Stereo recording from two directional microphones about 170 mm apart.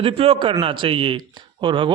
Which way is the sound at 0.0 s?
35° right (ahead or behind).